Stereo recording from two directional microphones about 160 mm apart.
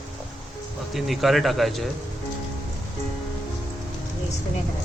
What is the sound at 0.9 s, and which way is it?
Speech, centre (ahead or behind).